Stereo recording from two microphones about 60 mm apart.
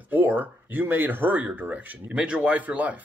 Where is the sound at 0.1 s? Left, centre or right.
Right.